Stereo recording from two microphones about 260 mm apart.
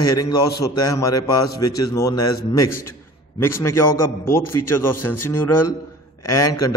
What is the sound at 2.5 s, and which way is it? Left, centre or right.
Speech, left.